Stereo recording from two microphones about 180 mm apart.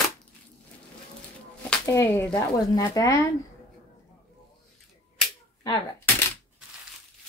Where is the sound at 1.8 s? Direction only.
15° left (ahead or behind).